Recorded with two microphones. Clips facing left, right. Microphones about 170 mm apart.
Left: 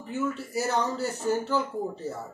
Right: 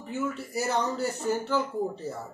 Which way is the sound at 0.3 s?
Centre (ahead or behind).